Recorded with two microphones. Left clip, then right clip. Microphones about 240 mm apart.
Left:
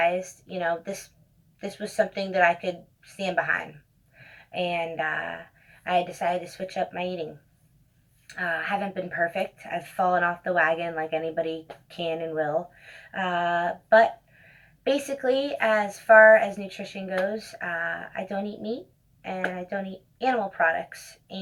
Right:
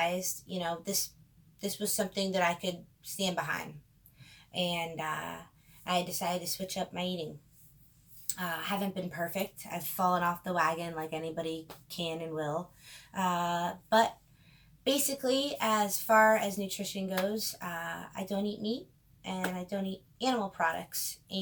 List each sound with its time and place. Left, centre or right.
0.0 s a woman's voice: right
4.5 s a woman's voice: right
8.4 s a woman's voice: right
17.7 s speech: right
18.2 s a woman's voice: right